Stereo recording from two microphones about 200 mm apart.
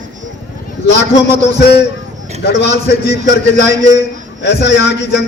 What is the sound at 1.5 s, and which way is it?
Speech, 55° left (ahead or behind).